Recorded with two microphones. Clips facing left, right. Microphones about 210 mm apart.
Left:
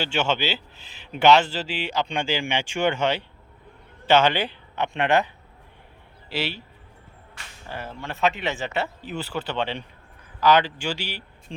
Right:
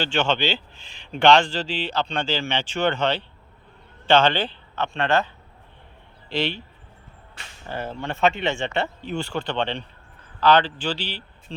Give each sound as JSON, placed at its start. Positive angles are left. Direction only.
{"t": 0.0, "sound": "a man's voice", "side_deg": 10}
{"t": 6.2, "sound": "speech", "side_deg": 5}
{"t": 7.7, "sound": "speech", "side_deg": -30}
{"t": 8.0, "sound": "a man's voice", "side_deg": 0}